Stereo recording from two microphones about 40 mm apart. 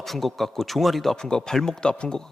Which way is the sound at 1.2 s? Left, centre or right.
Centre.